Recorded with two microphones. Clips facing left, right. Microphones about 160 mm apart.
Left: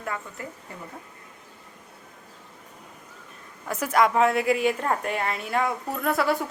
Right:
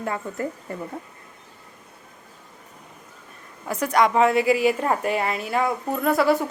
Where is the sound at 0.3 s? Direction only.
40° right (ahead or behind).